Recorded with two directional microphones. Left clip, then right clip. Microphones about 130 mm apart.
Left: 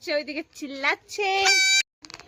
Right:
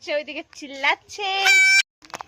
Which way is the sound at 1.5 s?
5° right (ahead or behind).